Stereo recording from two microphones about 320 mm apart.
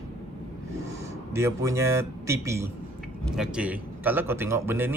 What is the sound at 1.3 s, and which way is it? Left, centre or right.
Speech, centre.